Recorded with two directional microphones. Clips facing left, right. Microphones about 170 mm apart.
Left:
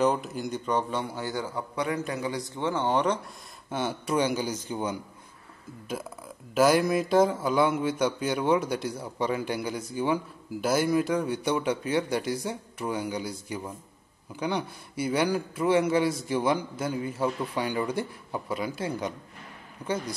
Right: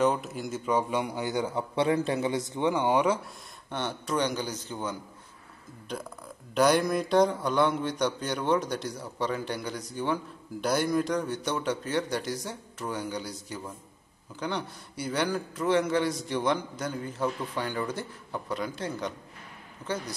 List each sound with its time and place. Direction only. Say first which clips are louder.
0.0 s a man's voice: left 1 dB; centre (ahead or behind)
3.7 s a man's voice: left 3 dB; 10° left (ahead or behind)